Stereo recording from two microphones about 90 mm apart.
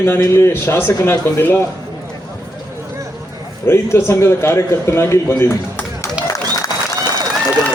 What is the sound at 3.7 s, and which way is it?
A man's voice, 25° left (ahead or behind).